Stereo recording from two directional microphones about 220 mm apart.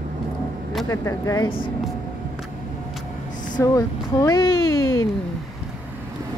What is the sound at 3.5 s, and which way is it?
Speech, 15° left (ahead or behind).